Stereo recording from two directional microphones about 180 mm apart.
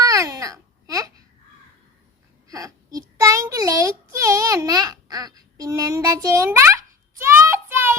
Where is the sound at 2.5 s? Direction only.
20° right (ahead or behind).